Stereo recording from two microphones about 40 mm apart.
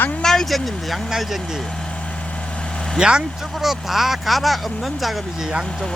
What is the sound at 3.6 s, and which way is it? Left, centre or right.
Speech, centre.